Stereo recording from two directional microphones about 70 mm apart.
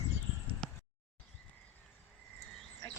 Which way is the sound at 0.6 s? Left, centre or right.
Centre.